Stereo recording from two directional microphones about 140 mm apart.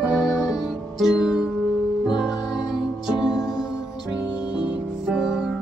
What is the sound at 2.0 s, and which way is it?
Music, 30° left (ahead or behind).